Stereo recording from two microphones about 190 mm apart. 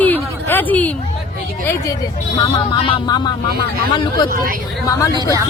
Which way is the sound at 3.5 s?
55° right (ahead or behind).